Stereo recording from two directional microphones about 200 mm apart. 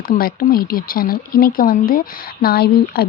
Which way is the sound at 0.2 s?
45° left (ahead or behind).